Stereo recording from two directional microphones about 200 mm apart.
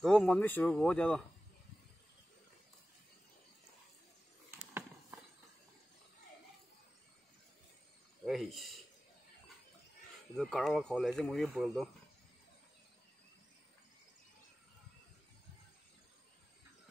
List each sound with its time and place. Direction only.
0.0 s speech: 5° left (ahead or behind)
8.3 s speech: centre (ahead or behind)
10.3 s speech: centre (ahead or behind)